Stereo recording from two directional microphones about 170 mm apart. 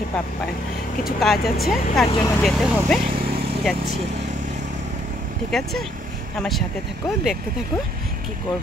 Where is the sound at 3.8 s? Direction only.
40° right (ahead or behind).